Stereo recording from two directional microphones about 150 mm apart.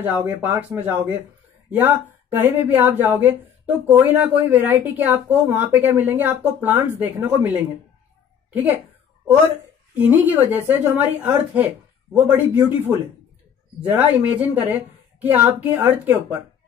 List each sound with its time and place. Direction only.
0.0 s speech: 10° right (ahead or behind)
2.3 s speech: 15° right (ahead or behind)
9.9 s speech: 15° right (ahead or behind)